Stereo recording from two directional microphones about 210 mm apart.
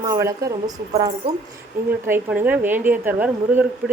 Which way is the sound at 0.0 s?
15° right (ahead or behind).